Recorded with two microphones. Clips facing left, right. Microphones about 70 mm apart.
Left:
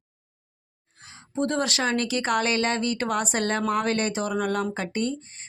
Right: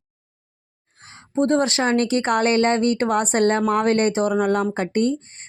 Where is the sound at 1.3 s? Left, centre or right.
Right.